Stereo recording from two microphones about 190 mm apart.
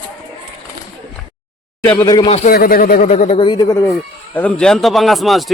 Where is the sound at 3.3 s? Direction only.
25° left (ahead or behind).